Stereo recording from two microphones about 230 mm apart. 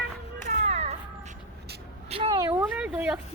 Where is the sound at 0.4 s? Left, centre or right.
Right.